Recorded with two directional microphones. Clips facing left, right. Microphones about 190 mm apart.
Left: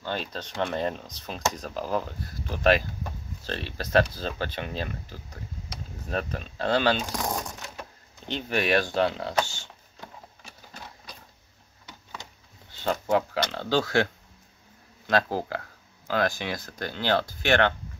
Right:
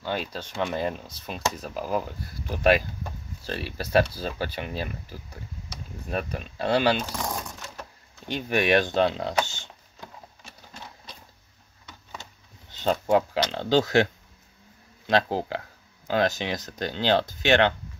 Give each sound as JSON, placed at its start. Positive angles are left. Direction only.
{"t": 0.0, "sound": "speech", "side_deg": -10}
{"t": 8.3, "sound": "speech", "side_deg": -15}
{"t": 12.7, "sound": "speech", "side_deg": -20}
{"t": 15.0, "sound": "speech", "side_deg": -20}